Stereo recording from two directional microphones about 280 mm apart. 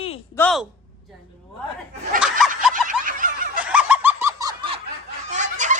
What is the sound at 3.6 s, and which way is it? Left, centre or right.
Snicker, centre.